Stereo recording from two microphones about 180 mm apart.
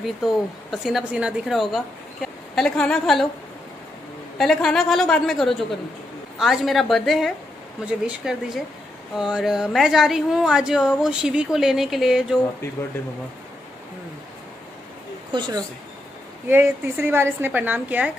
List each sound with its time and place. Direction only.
0.0 s speech: centre (ahead or behind)
4.4 s speech: centre (ahead or behind)
15.3 s speech: 25° right (ahead or behind)
16.4 s a woman's voice: 10° right (ahead or behind)